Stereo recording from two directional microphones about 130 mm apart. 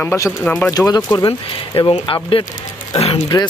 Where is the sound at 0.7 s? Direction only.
30° left (ahead or behind).